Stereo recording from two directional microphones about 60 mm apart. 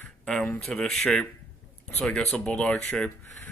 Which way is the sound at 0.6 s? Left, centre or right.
Centre.